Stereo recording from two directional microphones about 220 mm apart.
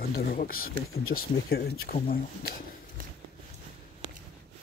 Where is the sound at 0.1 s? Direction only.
40° left (ahead or behind).